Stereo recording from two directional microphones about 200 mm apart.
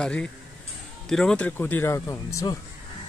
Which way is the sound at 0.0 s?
5° left (ahead or behind).